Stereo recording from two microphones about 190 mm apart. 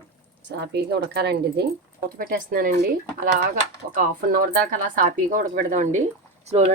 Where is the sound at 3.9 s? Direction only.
45° right (ahead or behind).